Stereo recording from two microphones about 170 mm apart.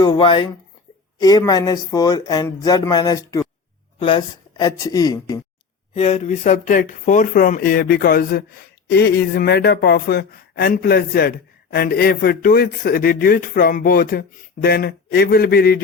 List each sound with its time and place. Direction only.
0.0 s speech: 25° left (ahead or behind)
5.9 s speech: 40° left (ahead or behind); by 15.8 s 65° left (ahead or behind)